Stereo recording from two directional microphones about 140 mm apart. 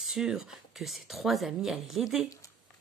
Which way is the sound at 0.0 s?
5° right (ahead or behind).